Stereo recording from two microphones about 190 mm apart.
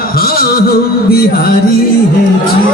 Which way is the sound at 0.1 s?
50° left (ahead or behind).